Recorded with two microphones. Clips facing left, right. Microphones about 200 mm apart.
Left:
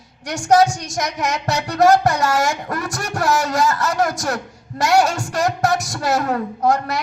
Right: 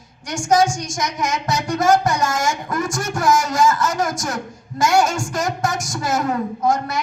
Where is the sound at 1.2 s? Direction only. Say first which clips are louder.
Right 1 dB; 40° left (ahead or behind).